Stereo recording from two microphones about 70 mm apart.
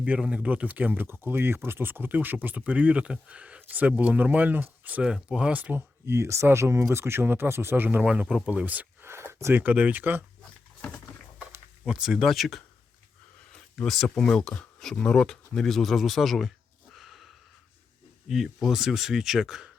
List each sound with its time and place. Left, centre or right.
0.0 s speech: centre
5.0 s speech: centre
6.1 s speech: right
7.9 s speech: centre
9.0 s speech: right
11.9 s speech: centre
13.8 s speech: centre
16.9 s a sound: centre
18.3 s speech: centre